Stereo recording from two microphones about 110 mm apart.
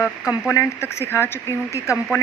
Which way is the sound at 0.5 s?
25° left (ahead or behind).